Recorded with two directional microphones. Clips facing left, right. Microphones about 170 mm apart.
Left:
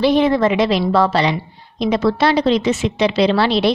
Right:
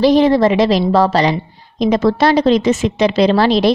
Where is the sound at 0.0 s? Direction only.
35° right (ahead or behind).